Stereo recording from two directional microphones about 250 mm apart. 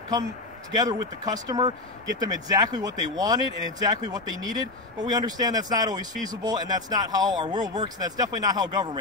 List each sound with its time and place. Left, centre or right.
0.7 s speech: centre